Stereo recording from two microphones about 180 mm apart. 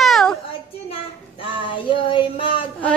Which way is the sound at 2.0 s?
30° left (ahead or behind).